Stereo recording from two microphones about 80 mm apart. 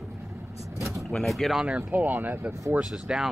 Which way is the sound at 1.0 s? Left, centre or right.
Centre.